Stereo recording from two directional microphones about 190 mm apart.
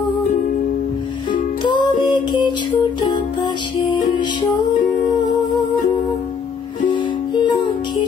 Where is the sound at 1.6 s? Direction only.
25° left (ahead or behind).